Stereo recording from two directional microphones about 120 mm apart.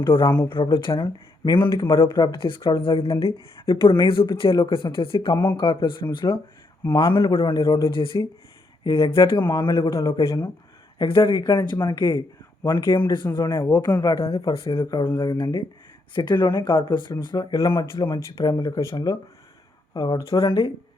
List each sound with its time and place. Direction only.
0.0 s speech: 45° left (ahead or behind)
7.9 s speech: 45° left (ahead or behind)
9.9 s speech: 30° left (ahead or behind)
10.9 s speech: 45° left (ahead or behind)
13.5 s speech: 20° left (ahead or behind)
13.8 s speech: 35° left (ahead or behind)
14.4 s speech: 50° left (ahead or behind)
14.8 s speech: 30° left (ahead or behind)
17.7 s speech: 40° left (ahead or behind)